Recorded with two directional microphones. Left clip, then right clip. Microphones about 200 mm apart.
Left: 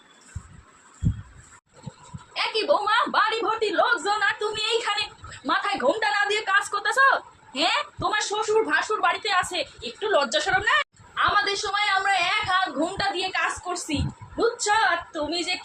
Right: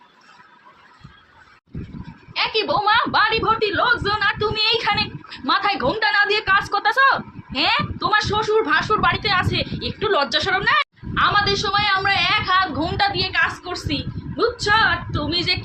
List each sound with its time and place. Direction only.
2.3 s a woman's voice: 10° right (ahead or behind)